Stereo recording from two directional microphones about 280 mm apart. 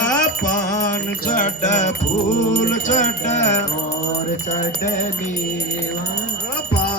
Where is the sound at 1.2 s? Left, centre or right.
Left.